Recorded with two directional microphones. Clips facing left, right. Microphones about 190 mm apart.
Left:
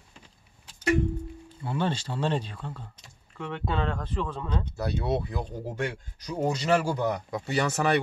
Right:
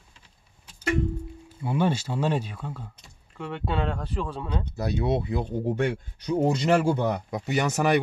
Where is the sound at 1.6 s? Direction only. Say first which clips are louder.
Right 4 dB; 10° right (ahead or behind).